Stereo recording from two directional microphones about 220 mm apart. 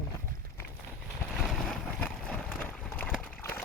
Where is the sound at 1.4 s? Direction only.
Centre (ahead or behind).